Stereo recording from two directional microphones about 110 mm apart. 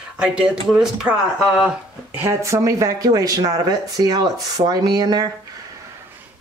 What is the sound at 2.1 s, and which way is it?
Speech, 25° right (ahead or behind).